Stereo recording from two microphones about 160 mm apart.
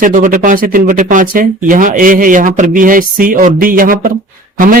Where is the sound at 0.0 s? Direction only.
55° right (ahead or behind).